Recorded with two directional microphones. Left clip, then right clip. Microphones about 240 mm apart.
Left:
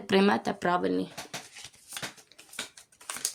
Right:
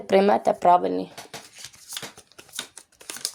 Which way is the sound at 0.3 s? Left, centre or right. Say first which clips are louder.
Right 9 dB; left.